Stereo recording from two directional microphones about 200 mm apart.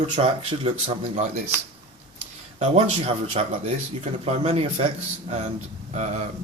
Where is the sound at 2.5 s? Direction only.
35° right (ahead or behind).